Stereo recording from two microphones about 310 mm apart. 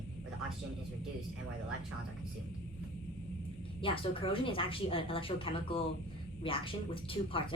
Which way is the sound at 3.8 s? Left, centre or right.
Centre.